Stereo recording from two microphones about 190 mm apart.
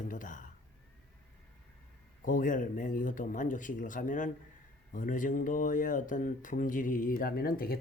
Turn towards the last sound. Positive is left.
turn(degrees=50)  # may be behind; listen again after turning